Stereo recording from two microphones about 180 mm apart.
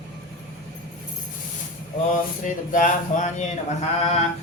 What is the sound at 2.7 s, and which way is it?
Mantra, 45° left (ahead or behind).